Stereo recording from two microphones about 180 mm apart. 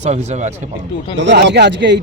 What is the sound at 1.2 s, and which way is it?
Speech, 75° right (ahead or behind).